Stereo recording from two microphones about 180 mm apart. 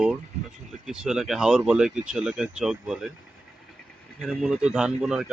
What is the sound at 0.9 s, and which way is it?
Speech, 5° right (ahead or behind).